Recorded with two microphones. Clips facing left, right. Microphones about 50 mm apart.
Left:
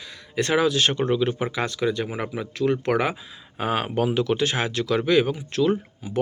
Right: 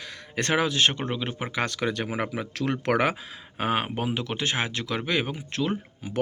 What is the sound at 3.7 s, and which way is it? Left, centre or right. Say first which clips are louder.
Speech: left 4 dB; right.